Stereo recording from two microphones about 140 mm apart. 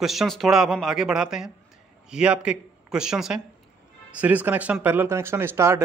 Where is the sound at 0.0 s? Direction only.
Centre (ahead or behind).